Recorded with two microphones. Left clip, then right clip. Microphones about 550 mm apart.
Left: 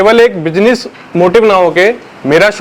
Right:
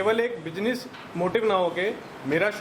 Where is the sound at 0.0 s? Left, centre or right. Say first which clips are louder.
Left 18 dB; left.